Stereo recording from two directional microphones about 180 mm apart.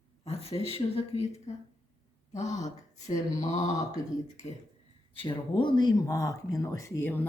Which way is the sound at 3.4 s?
40° left (ahead or behind).